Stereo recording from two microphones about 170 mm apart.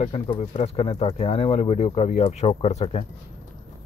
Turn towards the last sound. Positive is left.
turn(degrees=40)  # may be behind; listen again after turning